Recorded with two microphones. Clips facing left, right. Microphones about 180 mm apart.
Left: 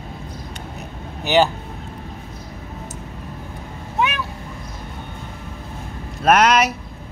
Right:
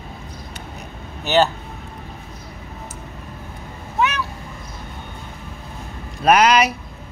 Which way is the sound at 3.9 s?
15° left (ahead or behind).